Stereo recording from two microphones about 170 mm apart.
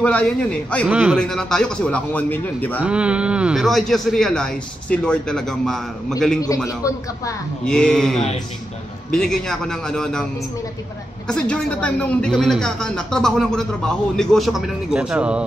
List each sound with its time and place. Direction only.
0.0 s a man's voice: 5° left (ahead or behind)
0.8 s speech: 5° right (ahead or behind); by 2.8 s 10° left (ahead or behind)
2.8 s speech: 5° right (ahead or behind)
6.4 s a man's voice: 20° left (ahead or behind)
7.6 s speech: 5° left (ahead or behind)
11.2 s speech: 5° left (ahead or behind)